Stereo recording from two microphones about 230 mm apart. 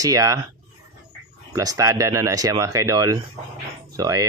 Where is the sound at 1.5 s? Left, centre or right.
Centre.